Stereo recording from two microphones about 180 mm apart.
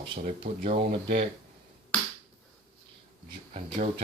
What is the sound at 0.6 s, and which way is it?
Speech, 50° right (ahead or behind).